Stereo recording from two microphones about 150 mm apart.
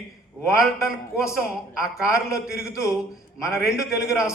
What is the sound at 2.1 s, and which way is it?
Speech, 20° left (ahead or behind).